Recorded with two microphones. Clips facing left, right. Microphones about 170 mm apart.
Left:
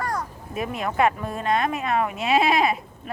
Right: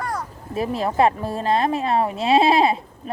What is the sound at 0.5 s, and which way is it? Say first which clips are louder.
A woman's voice: right 4 dB; 30° right (ahead or behind).